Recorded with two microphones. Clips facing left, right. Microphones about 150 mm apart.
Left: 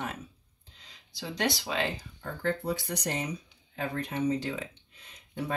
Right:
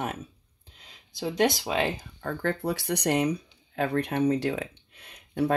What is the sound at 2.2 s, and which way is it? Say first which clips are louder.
Speech: right 2 dB; 65° right (ahead or behind).